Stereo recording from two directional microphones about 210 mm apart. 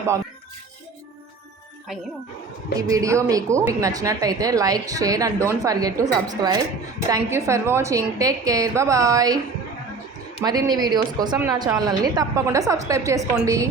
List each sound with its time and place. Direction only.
2.9 s speech: 15° right (ahead or behind)
10.4 s speech: 20° right (ahead or behind)